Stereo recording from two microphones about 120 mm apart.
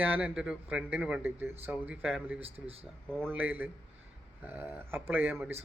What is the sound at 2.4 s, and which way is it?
Speech, 55° right (ahead or behind).